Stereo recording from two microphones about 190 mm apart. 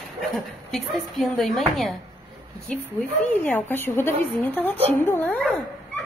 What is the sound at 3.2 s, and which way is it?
Speech, 10° left (ahead or behind).